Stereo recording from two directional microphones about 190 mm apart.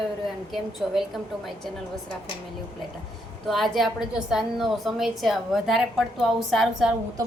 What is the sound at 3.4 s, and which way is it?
A woman's voice, centre (ahead or behind).